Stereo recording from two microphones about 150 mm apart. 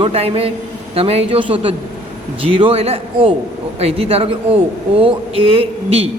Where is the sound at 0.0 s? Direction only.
40° right (ahead or behind).